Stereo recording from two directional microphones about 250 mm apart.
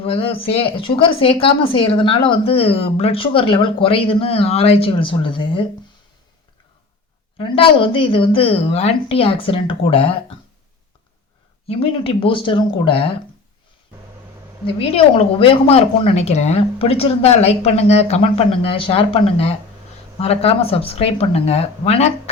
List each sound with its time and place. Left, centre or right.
0.0 s a woman's voice: left
7.3 s a woman's voice: centre
11.7 s a woman's voice: left
14.8 s a woman's voice: left